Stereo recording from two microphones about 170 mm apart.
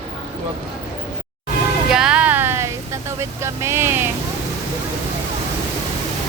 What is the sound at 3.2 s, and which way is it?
Speech, 15° right (ahead or behind).